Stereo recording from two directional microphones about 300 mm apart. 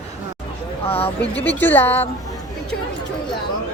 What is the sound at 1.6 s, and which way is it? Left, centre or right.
Speech, centre.